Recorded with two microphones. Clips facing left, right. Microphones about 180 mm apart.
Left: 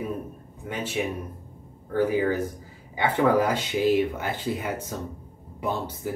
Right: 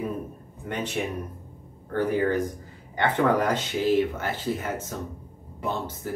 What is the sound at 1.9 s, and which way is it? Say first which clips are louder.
Speech: left 1 dB; 10° left (ahead or behind).